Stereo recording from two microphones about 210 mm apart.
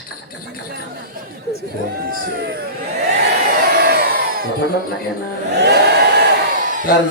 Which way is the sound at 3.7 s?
50° right (ahead or behind).